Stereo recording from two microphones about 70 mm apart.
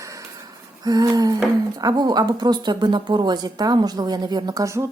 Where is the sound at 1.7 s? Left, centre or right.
Right.